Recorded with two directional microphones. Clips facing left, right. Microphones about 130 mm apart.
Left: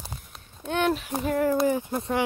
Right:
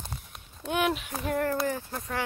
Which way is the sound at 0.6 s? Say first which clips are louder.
Left 3 dB; 5° right (ahead or behind).